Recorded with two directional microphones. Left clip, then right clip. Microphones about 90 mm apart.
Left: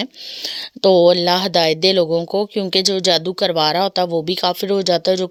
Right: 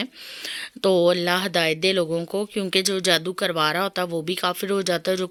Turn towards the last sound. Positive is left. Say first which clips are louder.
# left 7 dB
turn(degrees=40)  # may be behind; listen again after turning